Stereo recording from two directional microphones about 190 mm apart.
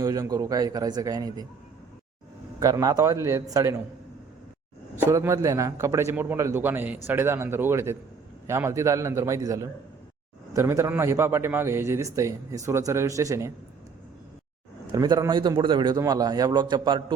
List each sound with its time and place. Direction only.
0.0 s a man's voice: 20° right (ahead or behind)
2.6 s a man's voice: 15° right (ahead or behind)
4.9 s a man's voice: 10° right (ahead or behind)
14.9 s a man's voice: 20° right (ahead or behind)